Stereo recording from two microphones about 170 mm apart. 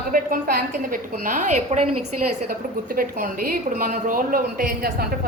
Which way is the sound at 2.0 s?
60° right (ahead or behind).